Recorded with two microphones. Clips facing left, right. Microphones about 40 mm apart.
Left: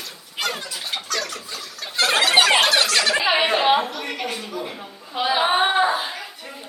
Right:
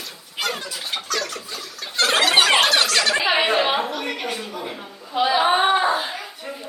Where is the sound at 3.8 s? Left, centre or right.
Right.